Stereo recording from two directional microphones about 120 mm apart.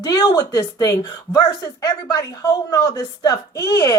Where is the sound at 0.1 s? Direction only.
35° left (ahead or behind).